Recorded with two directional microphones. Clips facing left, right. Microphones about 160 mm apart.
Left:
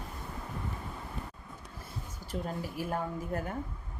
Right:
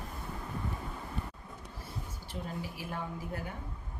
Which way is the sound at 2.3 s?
55° left (ahead or behind).